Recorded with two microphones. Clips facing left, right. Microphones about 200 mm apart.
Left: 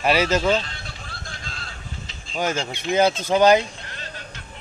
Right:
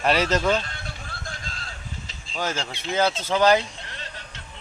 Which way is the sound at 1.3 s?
45° right (ahead or behind).